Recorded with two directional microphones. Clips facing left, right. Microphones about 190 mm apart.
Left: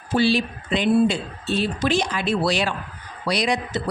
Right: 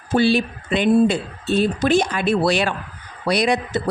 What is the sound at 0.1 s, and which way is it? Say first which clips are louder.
A woman's voice: right 3 dB; 50° right (ahead or behind).